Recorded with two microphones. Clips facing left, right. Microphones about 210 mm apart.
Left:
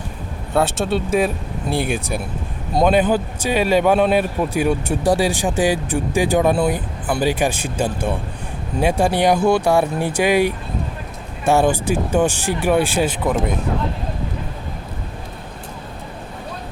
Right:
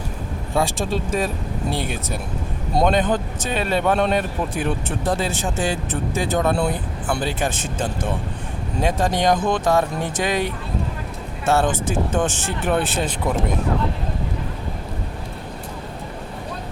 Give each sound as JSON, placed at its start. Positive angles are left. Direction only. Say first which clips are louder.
{"t": 0.5, "sound": "a man's voice", "louder": "left 3 dB", "side_deg": 0}